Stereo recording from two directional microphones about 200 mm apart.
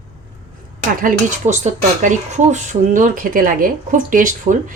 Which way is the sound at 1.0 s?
45° right (ahead or behind).